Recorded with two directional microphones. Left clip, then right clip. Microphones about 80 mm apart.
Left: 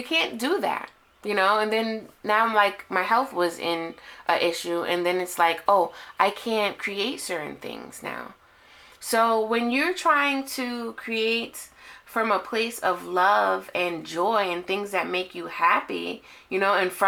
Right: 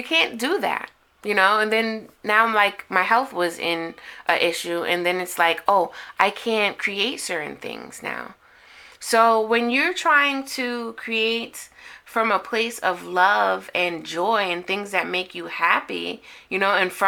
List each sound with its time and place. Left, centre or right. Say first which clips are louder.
0.0 s speech: right 4 dB; right